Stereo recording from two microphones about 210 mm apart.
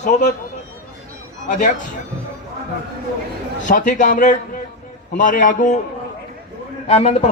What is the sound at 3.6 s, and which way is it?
A man's voice, 40° left (ahead or behind).